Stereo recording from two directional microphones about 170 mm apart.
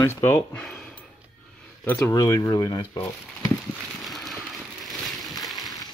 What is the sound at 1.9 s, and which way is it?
Speech, 20° left (ahead or behind).